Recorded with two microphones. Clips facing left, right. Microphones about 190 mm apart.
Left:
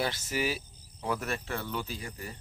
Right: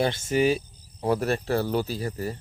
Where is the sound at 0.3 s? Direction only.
25° right (ahead or behind).